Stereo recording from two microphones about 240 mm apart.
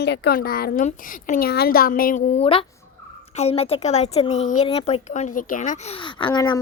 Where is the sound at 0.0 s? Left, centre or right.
Left.